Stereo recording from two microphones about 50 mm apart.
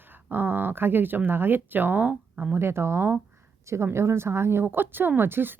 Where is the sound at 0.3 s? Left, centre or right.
Right.